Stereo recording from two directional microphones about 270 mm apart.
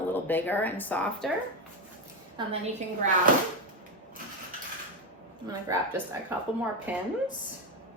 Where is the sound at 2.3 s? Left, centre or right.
Right.